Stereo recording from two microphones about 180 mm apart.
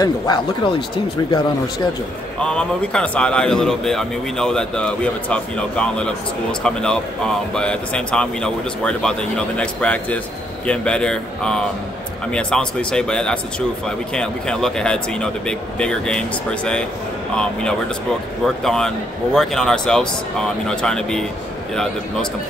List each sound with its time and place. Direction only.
0.0 s speech: 25° left (ahead or behind)
2.4 s a man's voice: 5° left (ahead or behind)